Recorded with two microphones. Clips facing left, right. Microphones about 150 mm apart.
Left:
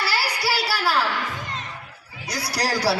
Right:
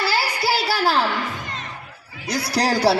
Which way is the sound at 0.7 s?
25° right (ahead or behind).